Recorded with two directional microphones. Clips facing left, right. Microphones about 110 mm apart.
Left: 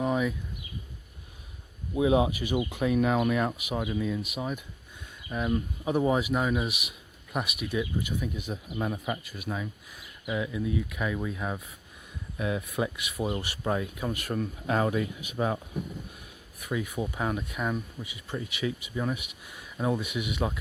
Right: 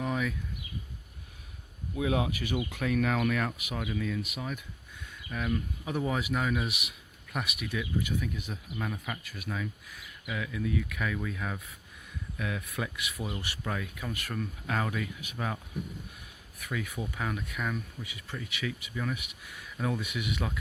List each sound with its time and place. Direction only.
0.0 s a sound: 20° left (ahead or behind)
2.0 s speech: 20° left (ahead or behind)
8.8 s speech: 25° left (ahead or behind)
16.6 s speech: 20° left (ahead or behind)